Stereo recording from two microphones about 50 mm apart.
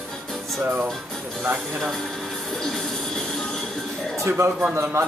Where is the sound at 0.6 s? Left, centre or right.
Right.